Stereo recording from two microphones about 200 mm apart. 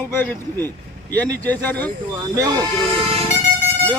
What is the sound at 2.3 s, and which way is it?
Speech, 20° right (ahead or behind).